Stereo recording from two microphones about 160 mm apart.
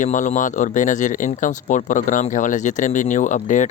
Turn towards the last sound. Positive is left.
turn(degrees=50)  # may be behind; listen again after turning